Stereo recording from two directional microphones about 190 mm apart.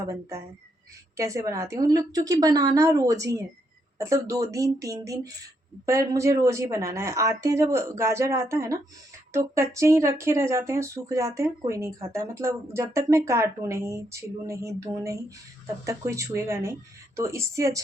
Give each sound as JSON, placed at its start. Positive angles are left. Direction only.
{"t": 0.0, "sound": "speech", "side_deg": -15}